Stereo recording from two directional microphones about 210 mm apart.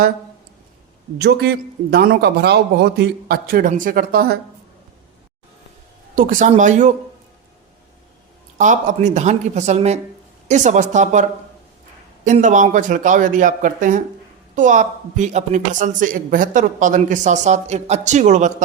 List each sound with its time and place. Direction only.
1.2 s a man's voice: 50° right (ahead or behind)
6.1 s a woman's voice: 40° right (ahead or behind)
8.5 s a woman's voice: 35° right (ahead or behind)